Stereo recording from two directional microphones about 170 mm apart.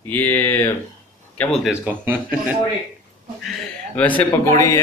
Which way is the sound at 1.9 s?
10° right (ahead or behind).